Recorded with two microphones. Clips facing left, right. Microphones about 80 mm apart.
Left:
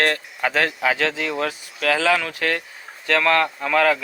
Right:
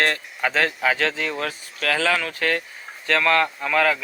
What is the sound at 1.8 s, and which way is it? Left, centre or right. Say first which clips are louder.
Speech: left 3 dB; left.